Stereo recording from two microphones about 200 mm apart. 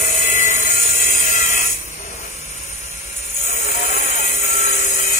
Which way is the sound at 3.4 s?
35° left (ahead or behind).